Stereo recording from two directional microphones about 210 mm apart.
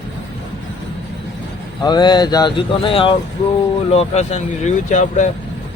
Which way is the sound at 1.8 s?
20° left (ahead or behind).